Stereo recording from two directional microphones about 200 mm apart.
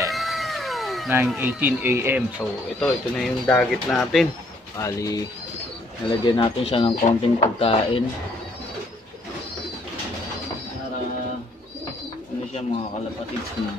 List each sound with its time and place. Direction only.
0.1 s cat: centre (ahead or behind)
1.0 s speech: 10° right (ahead or behind)
2.8 s speech: 5° left (ahead or behind)
4.7 s speech: 15° left (ahead or behind)